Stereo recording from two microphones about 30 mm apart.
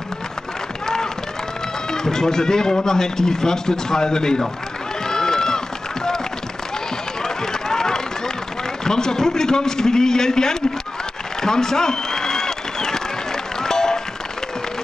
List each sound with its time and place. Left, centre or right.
1.9 s a man's voice: centre
5.0 s run: centre
7.2 s run: centre
8.8 s a man's voice: centre
11.4 s applause: centre
13.6 s music: centre